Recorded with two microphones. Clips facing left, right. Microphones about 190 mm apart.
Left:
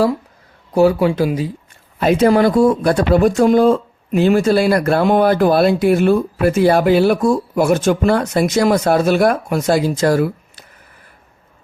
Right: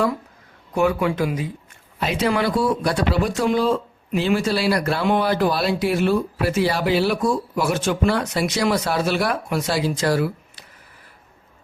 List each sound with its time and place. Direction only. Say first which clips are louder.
0.7 s speech: left 7 dB; 35° left (ahead or behind)
2.0 s speech: left 9 dB; 50° left (ahead or behind)